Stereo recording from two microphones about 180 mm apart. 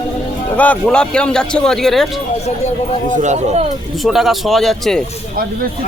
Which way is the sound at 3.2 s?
40° right (ahead or behind).